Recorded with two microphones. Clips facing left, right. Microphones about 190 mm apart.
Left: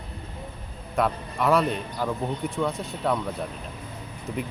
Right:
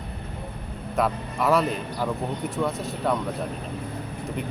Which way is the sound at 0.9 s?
Centre (ahead or behind).